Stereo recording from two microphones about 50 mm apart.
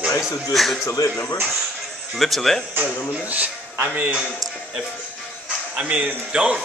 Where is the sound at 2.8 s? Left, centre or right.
Right.